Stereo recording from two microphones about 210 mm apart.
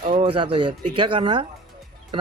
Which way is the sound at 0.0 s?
30° right (ahead or behind).